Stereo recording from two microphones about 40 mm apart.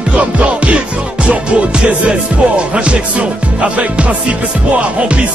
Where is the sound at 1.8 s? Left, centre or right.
Right.